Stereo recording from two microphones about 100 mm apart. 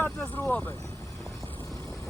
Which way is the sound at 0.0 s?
20° left (ahead or behind).